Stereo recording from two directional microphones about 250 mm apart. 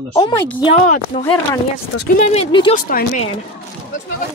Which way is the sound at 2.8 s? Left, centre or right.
Left.